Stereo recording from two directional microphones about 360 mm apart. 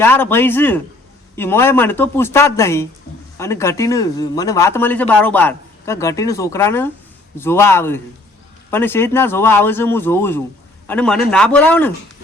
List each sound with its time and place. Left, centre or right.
0.0 s speech: centre